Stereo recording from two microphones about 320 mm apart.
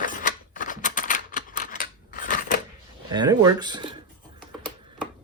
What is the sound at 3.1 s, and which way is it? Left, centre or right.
Speech, centre.